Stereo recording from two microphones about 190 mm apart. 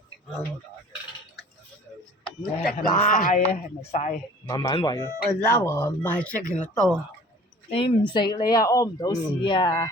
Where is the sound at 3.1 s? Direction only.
45° left (ahead or behind).